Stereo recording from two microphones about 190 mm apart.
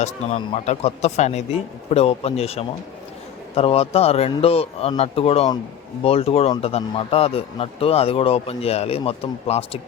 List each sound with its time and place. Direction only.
0.0 s a man's voice: 35° left (ahead or behind)